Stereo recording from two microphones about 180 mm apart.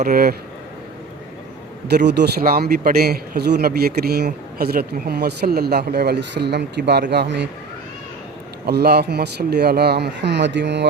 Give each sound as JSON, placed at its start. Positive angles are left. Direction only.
{"t": 0.0, "sound": "speech", "side_deg": -55}
{"t": 2.0, "sound": "a man's voice", "side_deg": -65}
{"t": 8.6, "sound": "speech", "side_deg": -60}